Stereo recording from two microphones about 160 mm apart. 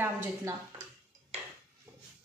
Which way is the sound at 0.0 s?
15° right (ahead or behind).